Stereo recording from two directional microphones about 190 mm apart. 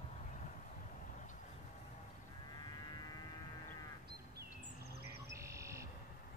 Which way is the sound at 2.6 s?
20° left (ahead or behind).